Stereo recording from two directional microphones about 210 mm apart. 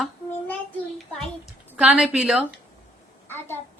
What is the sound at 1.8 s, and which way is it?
Speech, 5° right (ahead or behind).